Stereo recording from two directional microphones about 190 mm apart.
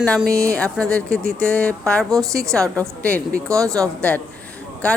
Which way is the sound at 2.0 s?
15° right (ahead or behind).